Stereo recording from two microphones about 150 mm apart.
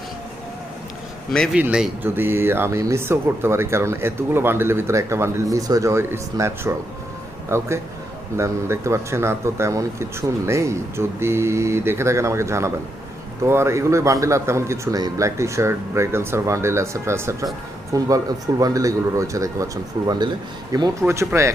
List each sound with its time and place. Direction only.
1.5 s speech: 5° right (ahead or behind)
8.4 s speech: 20° right (ahead or behind)